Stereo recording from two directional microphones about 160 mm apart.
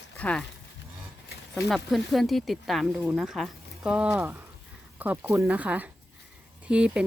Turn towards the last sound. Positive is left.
turn(degrees=-5)  # may be behind; listen again after turning